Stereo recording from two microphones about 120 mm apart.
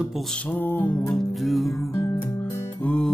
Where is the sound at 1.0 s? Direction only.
Centre (ahead or behind).